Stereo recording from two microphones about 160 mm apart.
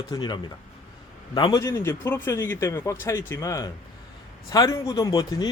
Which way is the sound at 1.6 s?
15° left (ahead or behind).